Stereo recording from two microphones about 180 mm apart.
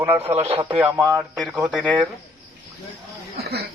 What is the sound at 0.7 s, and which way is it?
Speech, 5° right (ahead or behind).